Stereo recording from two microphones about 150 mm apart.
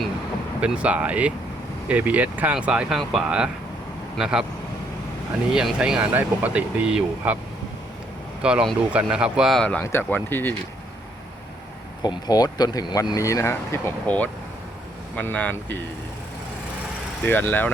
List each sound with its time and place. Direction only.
0.6 s speech: 10° right (ahead or behind)
5.5 s speech: 5° right (ahead or behind)
8.4 s speech: 5° right (ahead or behind); by 10.5 s 15° left (ahead or behind)
12.0 s speech: 25° left (ahead or behind); by 15.8 s 10° left (ahead or behind)
17.2 s speech: 15° left (ahead or behind)